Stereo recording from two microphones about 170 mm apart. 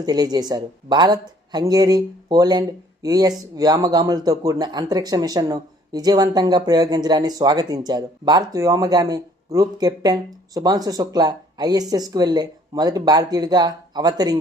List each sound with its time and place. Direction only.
0.0 s speech: 25° right (ahead or behind)